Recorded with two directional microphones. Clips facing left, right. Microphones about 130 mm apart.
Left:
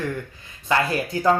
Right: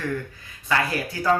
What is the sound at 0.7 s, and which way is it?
Speech, 25° left (ahead or behind).